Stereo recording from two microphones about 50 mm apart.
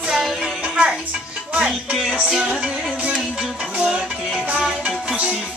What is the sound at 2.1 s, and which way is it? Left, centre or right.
Music, centre.